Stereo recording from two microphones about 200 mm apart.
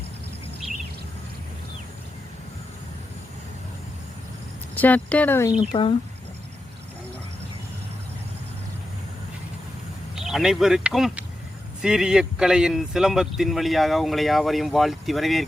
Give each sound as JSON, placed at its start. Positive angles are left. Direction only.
{"t": 4.7, "sound": "speech", "side_deg": 10}
{"t": 5.7, "sound": "speech", "side_deg": 25}
{"t": 10.2, "sound": "speech", "side_deg": 0}